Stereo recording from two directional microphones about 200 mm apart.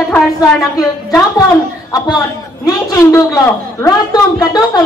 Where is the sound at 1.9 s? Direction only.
20° left (ahead or behind).